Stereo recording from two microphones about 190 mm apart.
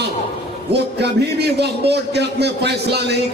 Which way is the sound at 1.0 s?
60° right (ahead or behind).